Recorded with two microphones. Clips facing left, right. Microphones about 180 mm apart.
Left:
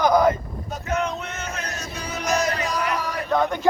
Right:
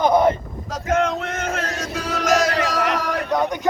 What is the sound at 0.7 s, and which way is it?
Male singing, 90° right.